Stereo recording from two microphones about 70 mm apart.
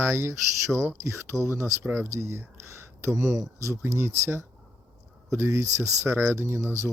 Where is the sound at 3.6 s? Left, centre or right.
Right.